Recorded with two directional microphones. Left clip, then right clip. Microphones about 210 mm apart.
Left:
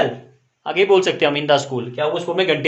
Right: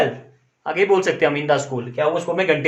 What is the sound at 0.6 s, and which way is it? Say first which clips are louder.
Speech: left 2 dB; 20° left (ahead or behind).